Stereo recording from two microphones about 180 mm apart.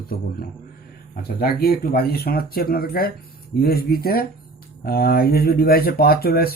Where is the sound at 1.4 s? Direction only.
60° left (ahead or behind).